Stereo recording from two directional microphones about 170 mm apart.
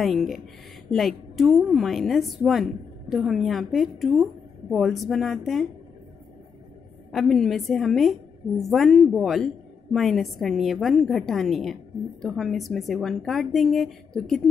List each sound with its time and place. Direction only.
0.0 s a woman's voice: centre (ahead or behind)
7.1 s a woman's voice: centre (ahead or behind)